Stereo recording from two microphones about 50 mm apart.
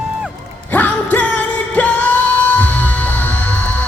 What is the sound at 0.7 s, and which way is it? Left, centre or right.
Music, left.